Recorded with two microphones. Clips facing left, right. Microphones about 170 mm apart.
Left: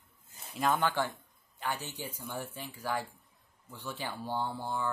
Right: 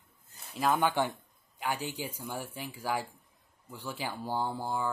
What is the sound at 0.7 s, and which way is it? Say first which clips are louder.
Speech: right 2 dB; 15° right (ahead or behind).